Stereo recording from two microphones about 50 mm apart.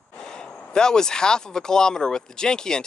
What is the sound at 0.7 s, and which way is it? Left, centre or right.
Speech, centre.